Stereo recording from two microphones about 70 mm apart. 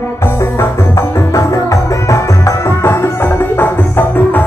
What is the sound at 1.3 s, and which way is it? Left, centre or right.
Music, left.